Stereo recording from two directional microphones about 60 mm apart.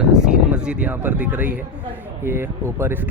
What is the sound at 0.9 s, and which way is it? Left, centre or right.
Speech, right.